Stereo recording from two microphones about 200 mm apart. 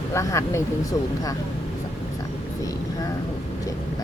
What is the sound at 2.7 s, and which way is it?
Speech, 15° left (ahead or behind).